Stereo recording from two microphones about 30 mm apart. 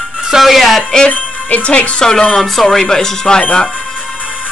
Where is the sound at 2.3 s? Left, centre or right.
Centre.